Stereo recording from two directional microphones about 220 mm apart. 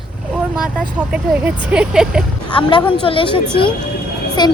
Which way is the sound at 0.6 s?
5° right (ahead or behind).